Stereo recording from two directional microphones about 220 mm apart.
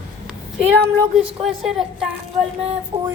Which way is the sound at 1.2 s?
Centre (ahead or behind).